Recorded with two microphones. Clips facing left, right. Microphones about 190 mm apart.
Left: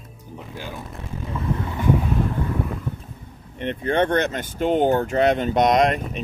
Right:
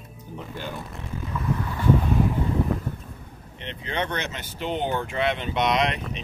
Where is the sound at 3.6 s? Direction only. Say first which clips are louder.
Left 9 dB; 50° left (ahead or behind).